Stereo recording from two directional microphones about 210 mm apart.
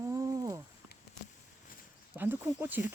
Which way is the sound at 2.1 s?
10° right (ahead or behind).